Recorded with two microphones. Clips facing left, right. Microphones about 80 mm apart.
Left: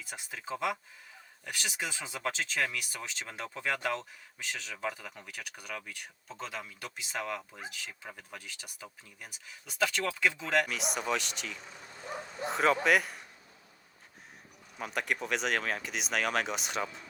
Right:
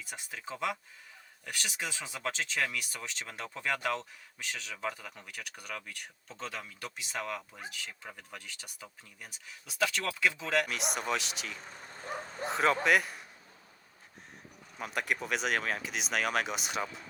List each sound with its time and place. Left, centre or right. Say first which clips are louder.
0.0 s speech: even; centre
11.6 s vehicle: right 1 dB; right
12.5 s speech: left 1 dB; centre
14.8 s speech: even; centre